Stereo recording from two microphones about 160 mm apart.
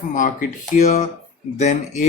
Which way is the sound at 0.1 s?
55° left (ahead or behind).